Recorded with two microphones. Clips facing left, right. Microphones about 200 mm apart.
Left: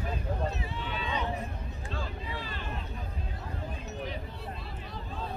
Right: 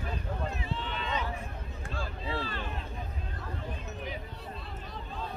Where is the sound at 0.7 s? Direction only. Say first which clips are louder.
Even; 10° left (ahead or behind).